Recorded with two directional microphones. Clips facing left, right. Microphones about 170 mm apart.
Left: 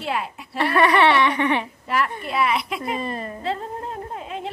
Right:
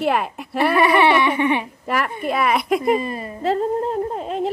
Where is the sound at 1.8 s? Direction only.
50° right (ahead or behind).